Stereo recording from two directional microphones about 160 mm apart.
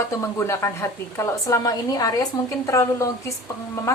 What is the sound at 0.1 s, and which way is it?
A woman's voice, 15° left (ahead or behind).